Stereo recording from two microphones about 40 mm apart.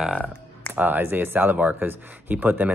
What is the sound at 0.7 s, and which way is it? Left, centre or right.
Speech, right.